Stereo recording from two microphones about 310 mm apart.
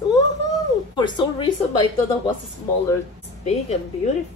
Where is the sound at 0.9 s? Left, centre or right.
Centre.